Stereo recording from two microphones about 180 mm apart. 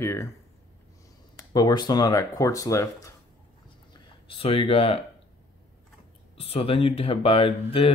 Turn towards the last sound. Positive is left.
turn(degrees=30)  # may be behind; listen again after turning